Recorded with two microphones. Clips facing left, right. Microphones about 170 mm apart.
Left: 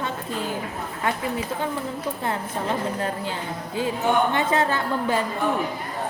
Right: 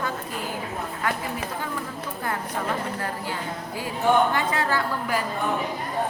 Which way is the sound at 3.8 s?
25° left (ahead or behind).